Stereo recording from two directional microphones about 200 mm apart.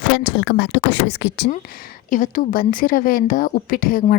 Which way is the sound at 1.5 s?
45° left (ahead or behind).